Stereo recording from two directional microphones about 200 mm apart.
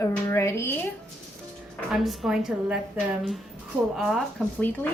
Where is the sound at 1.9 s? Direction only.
Centre (ahead or behind).